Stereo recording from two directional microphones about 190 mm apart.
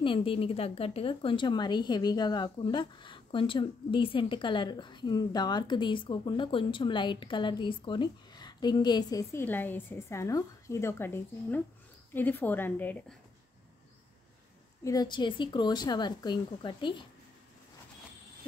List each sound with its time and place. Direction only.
0.0 s speech: 25° left (ahead or behind); by 12.9 s 10° left (ahead or behind)
14.8 s speech: 20° left (ahead or behind)